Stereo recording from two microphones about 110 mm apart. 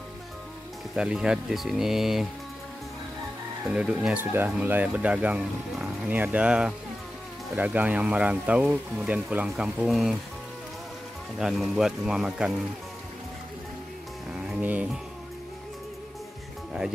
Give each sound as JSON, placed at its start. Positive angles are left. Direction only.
{"t": 0.9, "sound": "speech", "side_deg": -5}
{"t": 3.6, "sound": "speech", "side_deg": -10}
{"t": 11.3, "sound": "speech", "side_deg": -5}
{"t": 14.4, "sound": "music", "side_deg": -10}